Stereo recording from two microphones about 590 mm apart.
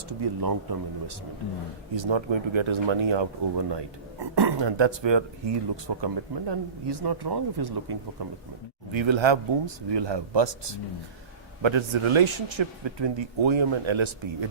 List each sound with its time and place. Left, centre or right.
0.1 s speech: right